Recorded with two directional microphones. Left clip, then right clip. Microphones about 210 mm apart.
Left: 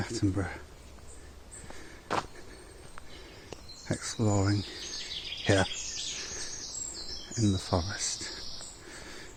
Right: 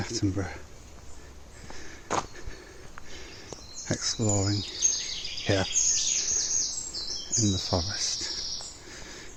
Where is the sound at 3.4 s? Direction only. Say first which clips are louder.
Right 3 dB; centre (ahead or behind).